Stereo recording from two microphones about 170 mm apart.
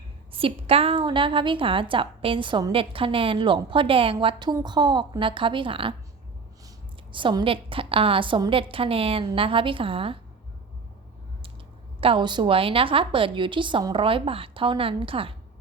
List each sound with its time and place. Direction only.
0.3 s a woman's voice: 35° right (ahead or behind)
7.1 s a woman's voice: 30° right (ahead or behind)
11.9 s a woman's voice: 30° right (ahead or behind)